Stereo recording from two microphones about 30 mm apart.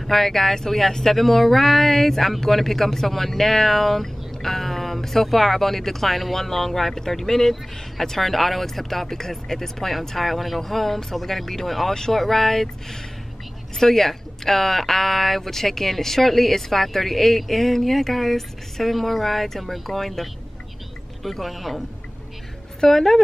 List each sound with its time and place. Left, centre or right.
0.0 s speech: centre
11.9 s speech: centre
12.2 s speech: centre
22.8 s speech: centre